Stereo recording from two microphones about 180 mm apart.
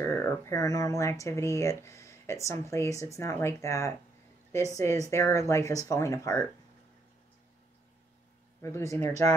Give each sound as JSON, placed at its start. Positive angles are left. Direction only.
{"t": 0.0, "sound": "speech", "side_deg": 15}
{"t": 5.1, "sound": "speech", "side_deg": 15}
{"t": 8.6, "sound": "speech", "side_deg": 15}
{"t": 9.0, "sound": "speech", "side_deg": -40}